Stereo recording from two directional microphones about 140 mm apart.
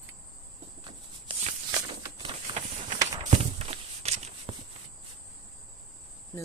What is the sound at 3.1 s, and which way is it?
Walk, 50° right (ahead or behind).